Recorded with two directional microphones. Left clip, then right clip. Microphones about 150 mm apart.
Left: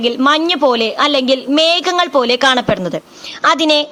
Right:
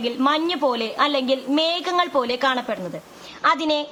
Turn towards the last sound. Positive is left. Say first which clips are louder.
# left 8 dB
turn(degrees=45)  # may be behind; listen again after turning